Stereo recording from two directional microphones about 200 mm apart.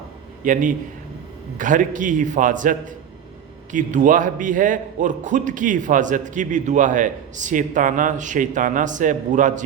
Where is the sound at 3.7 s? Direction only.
40° right (ahead or behind).